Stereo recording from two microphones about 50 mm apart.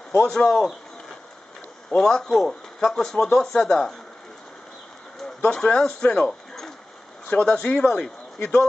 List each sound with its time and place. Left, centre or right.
0.1 s speech: centre
2.0 s speech: centre
5.5 s speech: centre